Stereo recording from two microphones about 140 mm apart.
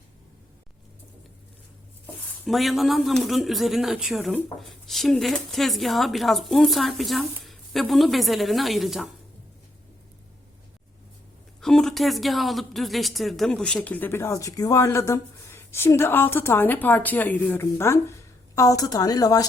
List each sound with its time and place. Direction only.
2.5 s speech: centre (ahead or behind)
11.6 s a woman's voice: 5° left (ahead or behind); by 19.5 s 25° left (ahead or behind)